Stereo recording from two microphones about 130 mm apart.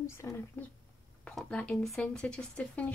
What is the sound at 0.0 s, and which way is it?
Speech, 20° left (ahead or behind).